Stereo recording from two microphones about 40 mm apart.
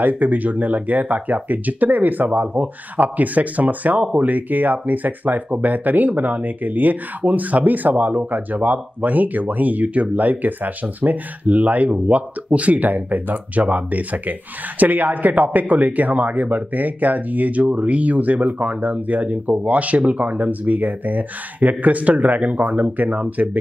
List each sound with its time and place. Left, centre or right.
0.0 s speech: right